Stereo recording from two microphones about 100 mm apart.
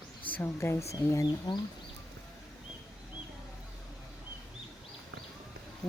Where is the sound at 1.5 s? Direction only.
45° left (ahead or behind).